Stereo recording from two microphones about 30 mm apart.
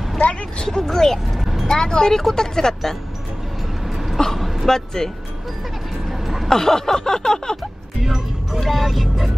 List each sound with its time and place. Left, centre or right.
0.3 s a sound: left
0.8 s speech: centre
1.4 s vehicle: centre
1.7 s speech: left
3.8 s vehicle: centre
4.4 s a sound: centre
4.6 s speech: centre
6.1 s vehicle: centre
6.5 s speech: centre
8.0 s music: centre
8.6 s speech: centre